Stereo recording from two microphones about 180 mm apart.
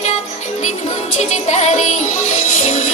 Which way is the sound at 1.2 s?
40° left (ahead or behind).